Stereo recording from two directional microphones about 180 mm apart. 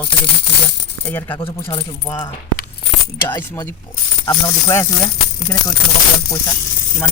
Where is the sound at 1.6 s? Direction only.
30° left (ahead or behind).